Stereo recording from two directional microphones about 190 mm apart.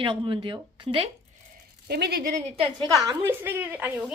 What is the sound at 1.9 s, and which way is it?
Speech, 60° right (ahead or behind).